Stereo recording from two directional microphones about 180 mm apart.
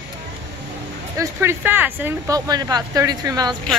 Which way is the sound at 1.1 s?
15° right (ahead or behind).